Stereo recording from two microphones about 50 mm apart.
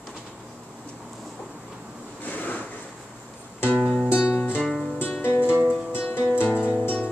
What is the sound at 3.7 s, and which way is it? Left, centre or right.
Music, left.